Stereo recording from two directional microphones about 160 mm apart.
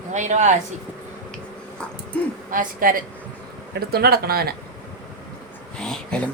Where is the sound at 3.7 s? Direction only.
75° right (ahead or behind).